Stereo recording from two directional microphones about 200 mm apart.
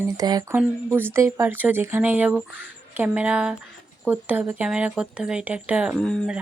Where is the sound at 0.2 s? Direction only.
20° right (ahead or behind).